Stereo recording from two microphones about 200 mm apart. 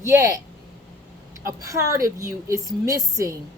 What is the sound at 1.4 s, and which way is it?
Speech, 15° right (ahead or behind).